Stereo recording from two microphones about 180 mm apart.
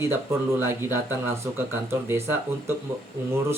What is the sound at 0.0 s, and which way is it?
Speech, 15° right (ahead or behind).